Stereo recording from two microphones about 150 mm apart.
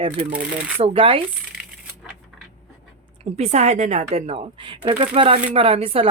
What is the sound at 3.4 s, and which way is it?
Speech, 45° right (ahead or behind).